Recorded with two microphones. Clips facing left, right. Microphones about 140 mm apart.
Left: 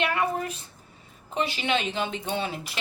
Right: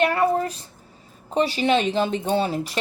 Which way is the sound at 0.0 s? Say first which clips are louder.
Right 6 dB; 35° right (ahead or behind).